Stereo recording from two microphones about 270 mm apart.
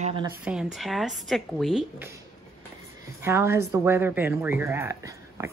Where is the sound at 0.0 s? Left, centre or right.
Centre.